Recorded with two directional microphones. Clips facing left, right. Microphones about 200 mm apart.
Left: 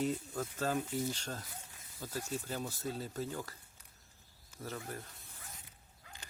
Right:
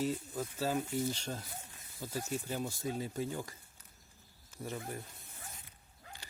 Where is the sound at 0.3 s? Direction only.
10° right (ahead or behind).